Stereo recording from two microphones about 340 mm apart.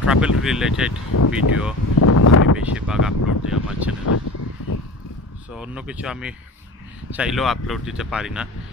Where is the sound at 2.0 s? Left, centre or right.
Left.